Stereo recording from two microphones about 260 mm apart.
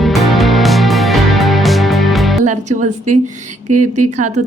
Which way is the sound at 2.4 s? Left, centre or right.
Right.